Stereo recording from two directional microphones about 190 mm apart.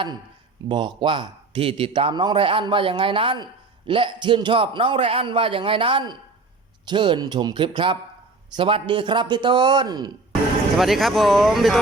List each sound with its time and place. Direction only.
0.7 s a man's voice: 25° right (ahead or behind)
10.8 s speech: centre (ahead or behind)